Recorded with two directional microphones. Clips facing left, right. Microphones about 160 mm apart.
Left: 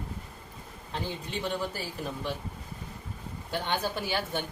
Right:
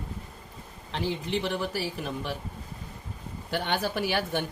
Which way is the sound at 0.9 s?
80° right.